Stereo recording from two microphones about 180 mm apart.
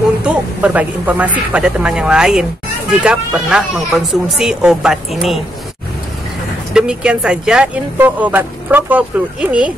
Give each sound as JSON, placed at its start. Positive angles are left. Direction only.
{"t": 0.2, "sound": "speech", "side_deg": -5}
{"t": 6.7, "sound": "speech", "side_deg": -5}